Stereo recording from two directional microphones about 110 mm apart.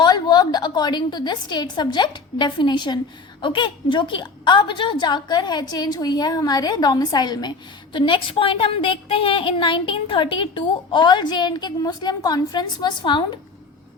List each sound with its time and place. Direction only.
0.0 s a woman's voice: 40° left (ahead or behind)